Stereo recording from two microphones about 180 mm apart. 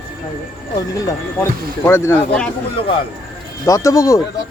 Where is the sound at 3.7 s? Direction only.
20° left (ahead or behind).